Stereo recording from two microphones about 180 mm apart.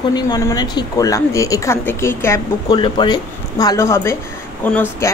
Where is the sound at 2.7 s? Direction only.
25° left (ahead or behind).